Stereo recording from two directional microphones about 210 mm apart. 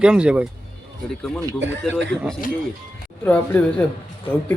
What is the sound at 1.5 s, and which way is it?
Speech, 60° right (ahead or behind).